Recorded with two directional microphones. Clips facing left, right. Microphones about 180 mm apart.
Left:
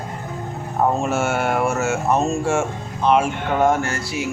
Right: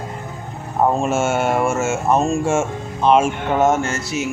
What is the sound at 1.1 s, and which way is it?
Speech, 25° right (ahead or behind).